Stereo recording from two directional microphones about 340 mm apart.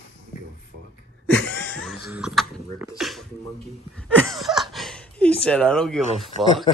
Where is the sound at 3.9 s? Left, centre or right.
Centre.